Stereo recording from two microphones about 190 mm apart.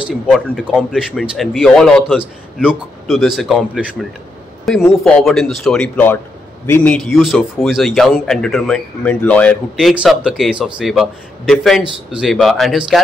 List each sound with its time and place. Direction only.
0.0 s a man's voice: 5° right (ahead or behind)